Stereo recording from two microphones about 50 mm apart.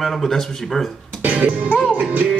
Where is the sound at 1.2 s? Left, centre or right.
Right.